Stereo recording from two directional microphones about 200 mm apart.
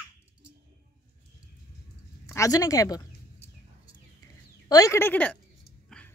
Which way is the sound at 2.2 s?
15° left (ahead or behind).